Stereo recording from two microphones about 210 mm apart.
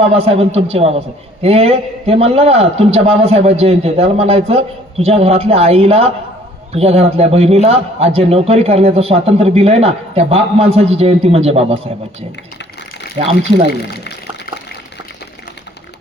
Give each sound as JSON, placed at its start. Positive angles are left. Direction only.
{"t": 0.0, "sound": "a man's voice", "side_deg": -30}
{"t": 13.2, "sound": "a man's voice", "side_deg": -30}
{"t": 13.8, "sound": "speech", "side_deg": 55}